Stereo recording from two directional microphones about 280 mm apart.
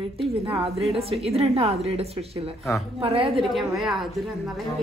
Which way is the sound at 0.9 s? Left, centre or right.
Right.